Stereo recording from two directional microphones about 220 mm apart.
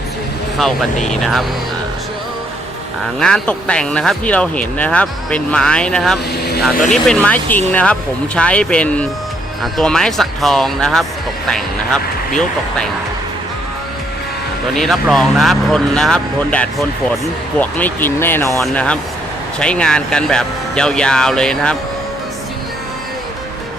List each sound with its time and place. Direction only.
1.0 s speech: centre (ahead or behind)
3.2 s speech: 5° left (ahead or behind)
6.3 s vehicle: 45° left (ahead or behind)
6.9 s speech: 5° left (ahead or behind)
14.8 s speech: centre (ahead or behind)